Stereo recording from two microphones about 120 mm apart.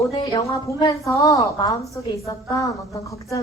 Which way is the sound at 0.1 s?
40° left (ahead or behind).